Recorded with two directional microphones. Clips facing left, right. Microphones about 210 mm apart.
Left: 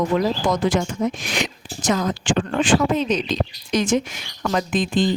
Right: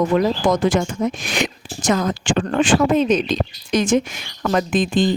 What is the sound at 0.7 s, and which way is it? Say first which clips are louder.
Speech: right 2 dB; 55° right (ahead or behind).